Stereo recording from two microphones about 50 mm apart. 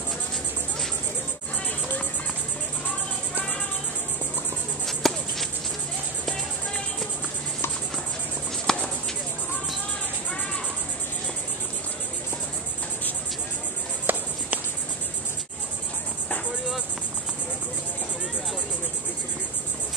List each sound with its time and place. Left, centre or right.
4.8 s music: centre
8.7 s a sound: centre
14.1 s music: right